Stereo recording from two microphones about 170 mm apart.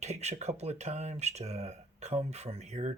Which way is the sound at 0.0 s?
40° right (ahead or behind).